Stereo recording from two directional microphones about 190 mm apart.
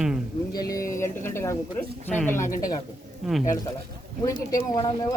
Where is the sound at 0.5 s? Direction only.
20° left (ahead or behind).